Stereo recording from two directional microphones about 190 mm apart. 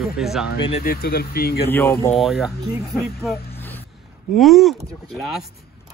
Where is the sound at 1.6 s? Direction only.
10° left (ahead or behind).